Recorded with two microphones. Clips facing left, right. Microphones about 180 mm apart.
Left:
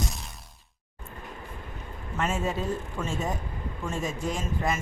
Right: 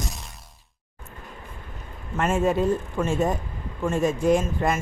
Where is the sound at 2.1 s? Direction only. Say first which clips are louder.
Right 7 dB; 55° right (ahead or behind).